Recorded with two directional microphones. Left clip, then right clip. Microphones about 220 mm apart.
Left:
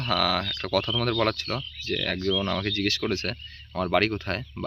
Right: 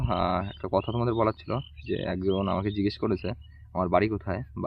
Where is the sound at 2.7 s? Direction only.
10° right (ahead or behind).